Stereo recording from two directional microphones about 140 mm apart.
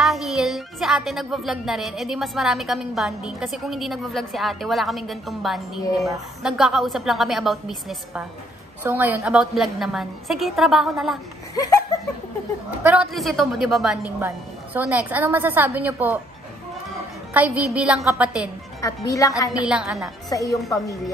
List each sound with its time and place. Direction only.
0.0 s speech: centre (ahead or behind)
8.8 s speech: 15° right (ahead or behind)
11.5 s laughter: 25° left (ahead or behind)
13.1 s speech: centre (ahead or behind)
14.2 s a woman's voice: 10° right (ahead or behind)
17.3 s a woman's voice: 10° right (ahead or behind)
18.8 s a woman's voice: 25° left (ahead or behind)
19.6 s speech: 5° right (ahead or behind)
20.2 s a woman's voice: 25° left (ahead or behind)